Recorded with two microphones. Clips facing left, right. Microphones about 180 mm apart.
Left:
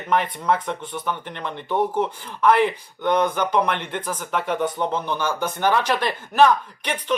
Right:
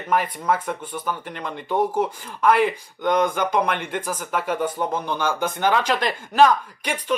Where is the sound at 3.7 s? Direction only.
10° right (ahead or behind).